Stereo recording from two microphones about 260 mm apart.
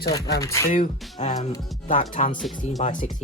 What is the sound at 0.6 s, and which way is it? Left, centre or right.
Speech, left.